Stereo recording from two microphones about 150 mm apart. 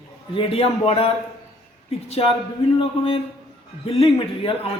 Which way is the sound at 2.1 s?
40° left (ahead or behind).